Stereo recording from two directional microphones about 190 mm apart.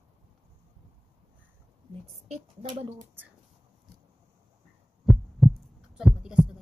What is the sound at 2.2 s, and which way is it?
Speech, 35° right (ahead or behind).